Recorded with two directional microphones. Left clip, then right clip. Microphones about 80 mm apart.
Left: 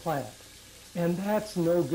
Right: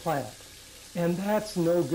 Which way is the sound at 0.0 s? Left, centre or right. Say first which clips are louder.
Right 2 dB; left.